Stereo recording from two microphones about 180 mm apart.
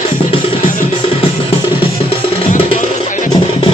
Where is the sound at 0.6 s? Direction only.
50° left (ahead or behind).